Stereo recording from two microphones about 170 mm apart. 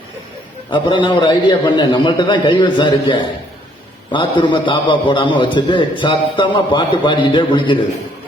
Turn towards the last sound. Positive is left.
turn(degrees=25)  # may be behind; listen again after turning